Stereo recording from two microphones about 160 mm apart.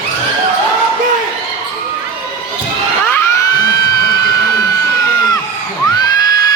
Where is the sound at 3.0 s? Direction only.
15° left (ahead or behind).